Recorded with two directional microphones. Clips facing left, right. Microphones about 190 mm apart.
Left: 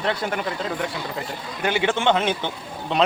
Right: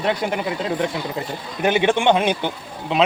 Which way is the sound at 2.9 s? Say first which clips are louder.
Right 2 dB; centre (ahead or behind).